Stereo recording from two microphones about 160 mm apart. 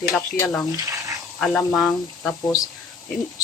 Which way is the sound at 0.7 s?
20° right (ahead or behind).